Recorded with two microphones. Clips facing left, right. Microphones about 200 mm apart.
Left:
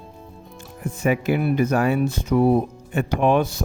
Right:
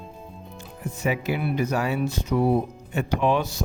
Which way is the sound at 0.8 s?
50° left (ahead or behind).